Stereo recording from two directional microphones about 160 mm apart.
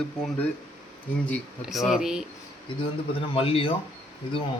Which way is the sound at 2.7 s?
30° left (ahead or behind).